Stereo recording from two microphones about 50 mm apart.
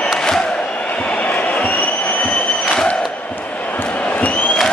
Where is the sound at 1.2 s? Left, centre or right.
Left.